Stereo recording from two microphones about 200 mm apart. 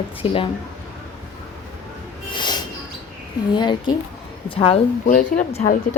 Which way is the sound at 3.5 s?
20° left (ahead or behind).